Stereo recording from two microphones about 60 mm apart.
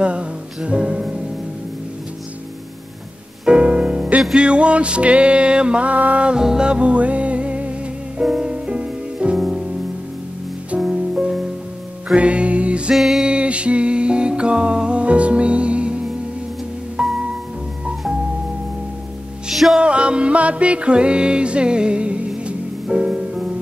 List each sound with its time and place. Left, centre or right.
0.0 s music: centre
3.4 s music: centre
10.8 s music: centre
12.9 s music: centre
13.3 s music: centre
19.5 s music: centre
19.8 s music: centre